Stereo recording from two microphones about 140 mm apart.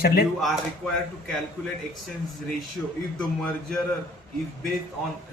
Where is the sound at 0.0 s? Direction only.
90° left.